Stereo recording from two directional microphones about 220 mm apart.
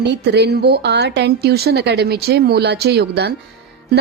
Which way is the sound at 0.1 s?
50° right (ahead or behind).